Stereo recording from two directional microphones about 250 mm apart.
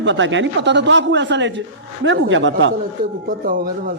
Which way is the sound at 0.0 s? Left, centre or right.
Right.